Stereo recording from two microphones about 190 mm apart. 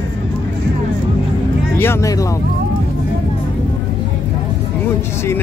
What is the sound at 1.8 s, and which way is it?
Vehicle, 15° left (ahead or behind).